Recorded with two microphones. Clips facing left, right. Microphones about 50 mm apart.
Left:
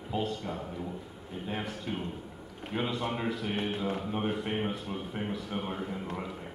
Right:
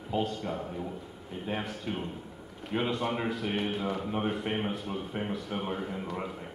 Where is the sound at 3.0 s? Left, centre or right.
Centre.